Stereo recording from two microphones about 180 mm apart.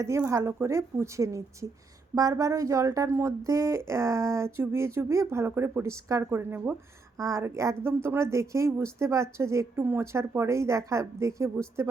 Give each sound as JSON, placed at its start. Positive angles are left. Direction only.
{"t": 0.0, "sound": "speech", "side_deg": -15}